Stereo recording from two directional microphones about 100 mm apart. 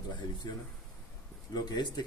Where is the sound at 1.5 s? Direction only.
40° left (ahead or behind).